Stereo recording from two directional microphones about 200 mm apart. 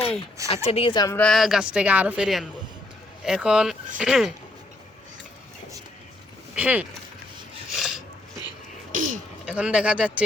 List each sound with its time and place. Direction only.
0.5 s a woman's voice: 30° left (ahead or behind)
1.2 s speech: centre (ahead or behind)
6.6 s speech: 5° right (ahead or behind)
7.8 s a sound: 5° right (ahead or behind)
8.9 s throat clearing: 40° right (ahead or behind)
9.5 s speech: 5° right (ahead or behind)